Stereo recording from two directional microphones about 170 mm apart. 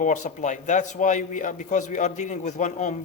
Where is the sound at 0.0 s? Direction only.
45° left (ahead or behind).